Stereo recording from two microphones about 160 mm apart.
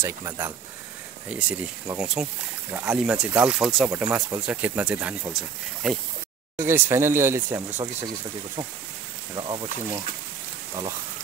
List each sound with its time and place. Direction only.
0.0 s speech: 20° right (ahead or behind)
1.3 s speech: 10° right (ahead or behind)
3.9 s speech: 15° right (ahead or behind)
6.6 s speech: 15° right (ahead or behind)
9.3 s speech: 30° right (ahead or behind)